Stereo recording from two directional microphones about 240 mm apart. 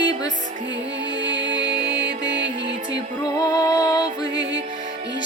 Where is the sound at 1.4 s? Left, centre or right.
Right.